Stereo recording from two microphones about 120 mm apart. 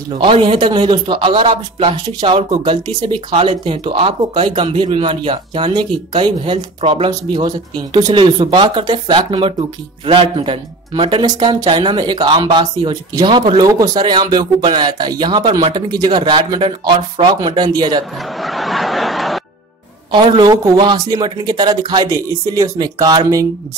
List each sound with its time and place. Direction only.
0.2 s speech: 45° right (ahead or behind)
18.4 s snicker: centre (ahead or behind)
20.1 s speech: 40° right (ahead or behind)